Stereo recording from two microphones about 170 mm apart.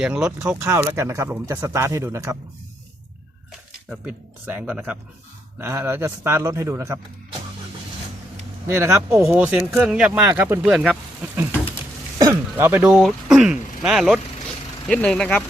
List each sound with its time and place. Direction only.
0.0 s speech: 5° right (ahead or behind)
3.8 s speech: 10° right (ahead or behind)
8.6 s speech: 15° right (ahead or behind)
12.2 s speech: 15° right (ahead or behind); by 15.4 s 5° left (ahead or behind)